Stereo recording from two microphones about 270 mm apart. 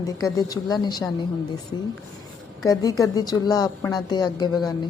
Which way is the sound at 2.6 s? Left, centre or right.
Centre.